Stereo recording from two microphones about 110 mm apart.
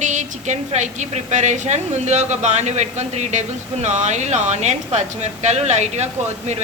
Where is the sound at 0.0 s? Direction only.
90° right.